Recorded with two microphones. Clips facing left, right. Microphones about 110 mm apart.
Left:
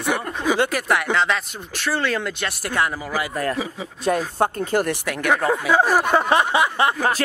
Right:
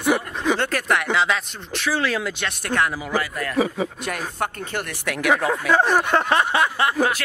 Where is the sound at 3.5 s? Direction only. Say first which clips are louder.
Right 6 dB; 55° right (ahead or behind).